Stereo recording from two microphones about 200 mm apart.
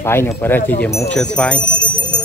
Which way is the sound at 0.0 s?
10° left (ahead or behind).